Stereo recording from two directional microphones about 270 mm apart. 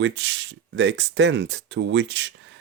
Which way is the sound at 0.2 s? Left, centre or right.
Right.